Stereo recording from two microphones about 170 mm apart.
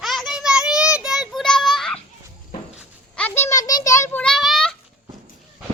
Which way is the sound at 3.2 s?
10° left (ahead or behind).